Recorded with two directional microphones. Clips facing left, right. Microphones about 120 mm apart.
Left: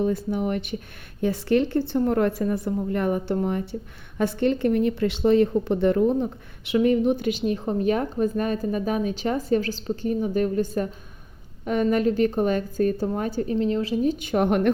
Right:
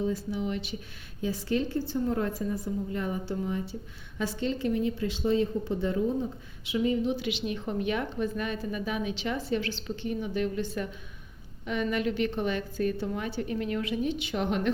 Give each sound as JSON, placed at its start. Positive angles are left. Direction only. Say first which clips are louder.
{"t": 0.0, "sound": "a woman's voice", "louder": "left 6 dB", "side_deg": 60}